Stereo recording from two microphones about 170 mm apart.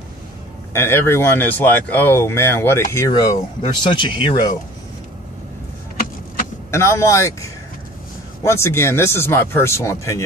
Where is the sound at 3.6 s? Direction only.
30° left (ahead or behind).